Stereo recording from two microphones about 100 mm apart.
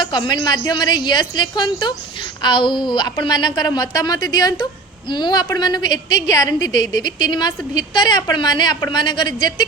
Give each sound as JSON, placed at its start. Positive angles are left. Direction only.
{"t": 0.0, "sound": "a woman's voice", "side_deg": 45}